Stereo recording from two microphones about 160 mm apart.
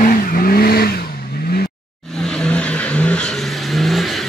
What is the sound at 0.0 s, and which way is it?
Vehicle, 65° left (ahead or behind).